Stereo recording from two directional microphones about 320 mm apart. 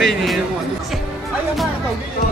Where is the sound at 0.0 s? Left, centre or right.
Centre.